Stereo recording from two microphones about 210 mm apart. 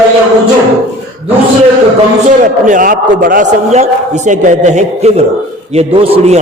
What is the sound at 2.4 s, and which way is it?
A man's voice, 40° right (ahead or behind).